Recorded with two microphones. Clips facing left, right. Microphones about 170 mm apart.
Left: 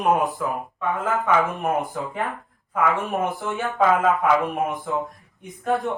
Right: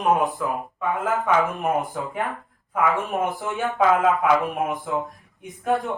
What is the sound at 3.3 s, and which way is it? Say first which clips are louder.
Speech: right 1 dB; centre (ahead or behind).